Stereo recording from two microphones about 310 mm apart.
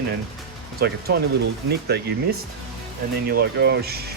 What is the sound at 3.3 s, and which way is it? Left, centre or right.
Speech, right.